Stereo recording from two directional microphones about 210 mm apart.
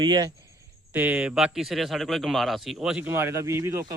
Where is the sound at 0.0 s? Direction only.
20° right (ahead or behind).